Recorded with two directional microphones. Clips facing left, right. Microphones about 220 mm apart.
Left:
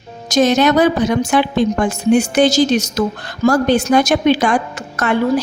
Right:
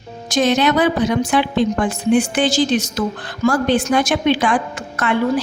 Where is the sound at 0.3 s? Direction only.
40° left (ahead or behind).